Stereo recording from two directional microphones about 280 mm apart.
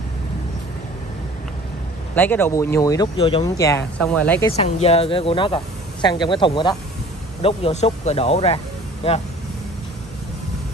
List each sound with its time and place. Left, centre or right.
2.1 s speech: centre
4.6 s speech: left